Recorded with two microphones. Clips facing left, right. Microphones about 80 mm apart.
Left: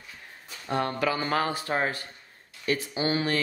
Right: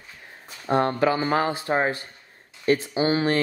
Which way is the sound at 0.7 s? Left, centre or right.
Right.